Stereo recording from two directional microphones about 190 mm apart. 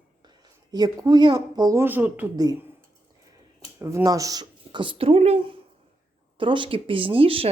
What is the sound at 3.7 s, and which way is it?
Speech, 15° right (ahead or behind).